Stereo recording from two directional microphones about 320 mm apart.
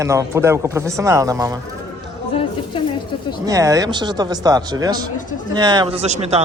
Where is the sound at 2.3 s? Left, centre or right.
Centre.